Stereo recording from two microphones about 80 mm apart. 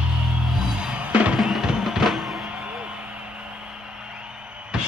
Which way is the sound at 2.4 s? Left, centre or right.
Centre.